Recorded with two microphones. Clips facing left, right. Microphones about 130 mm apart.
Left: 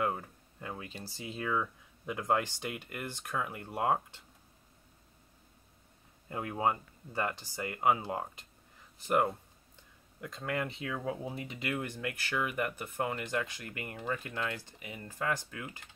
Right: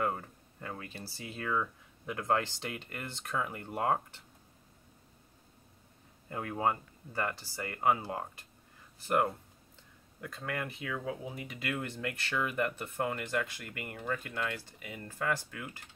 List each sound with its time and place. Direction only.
0.0 s speech: 10° left (ahead or behind)
6.3 s speech: 15° left (ahead or behind)
10.2 s speech: 20° left (ahead or behind)
10.8 s speech: 35° left (ahead or behind)
11.7 s speech: 15° left (ahead or behind)